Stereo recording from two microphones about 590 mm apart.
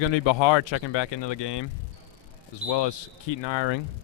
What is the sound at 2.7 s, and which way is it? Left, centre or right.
Speech, left.